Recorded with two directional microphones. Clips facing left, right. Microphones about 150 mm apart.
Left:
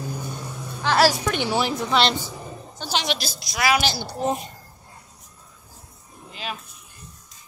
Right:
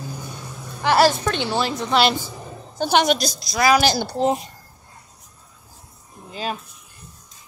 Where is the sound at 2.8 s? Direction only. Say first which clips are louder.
Right 9 dB; 55° right (ahead or behind).